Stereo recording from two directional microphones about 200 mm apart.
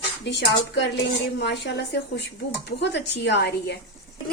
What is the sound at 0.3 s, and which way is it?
A woman's voice, 60° left (ahead or behind).